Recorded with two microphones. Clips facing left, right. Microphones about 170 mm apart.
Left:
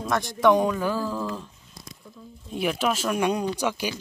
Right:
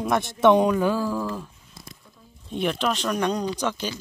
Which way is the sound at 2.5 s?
5° left (ahead or behind).